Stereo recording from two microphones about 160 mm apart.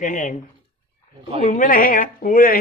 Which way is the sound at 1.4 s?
55° left (ahead or behind).